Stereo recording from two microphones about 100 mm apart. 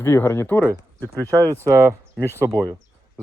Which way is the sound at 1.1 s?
30° right (ahead or behind).